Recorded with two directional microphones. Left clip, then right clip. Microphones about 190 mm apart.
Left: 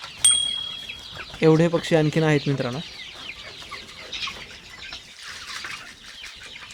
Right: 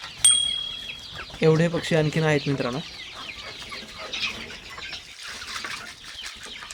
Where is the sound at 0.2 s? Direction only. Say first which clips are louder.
Even; centre (ahead or behind).